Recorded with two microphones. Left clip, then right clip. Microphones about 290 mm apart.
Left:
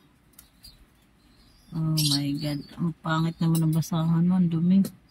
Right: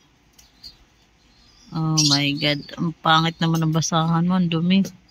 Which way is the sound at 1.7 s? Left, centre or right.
Centre.